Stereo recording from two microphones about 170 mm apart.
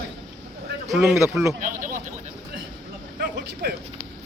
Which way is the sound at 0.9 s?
5° right (ahead or behind).